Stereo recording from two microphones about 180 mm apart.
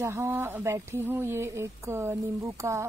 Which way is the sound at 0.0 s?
15° right (ahead or behind).